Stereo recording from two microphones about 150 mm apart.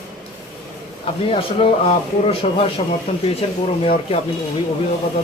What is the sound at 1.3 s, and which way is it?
Speech, 40° left (ahead or behind).